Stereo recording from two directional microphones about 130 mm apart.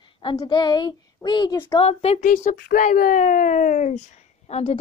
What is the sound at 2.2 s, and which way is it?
Speech, 80° left.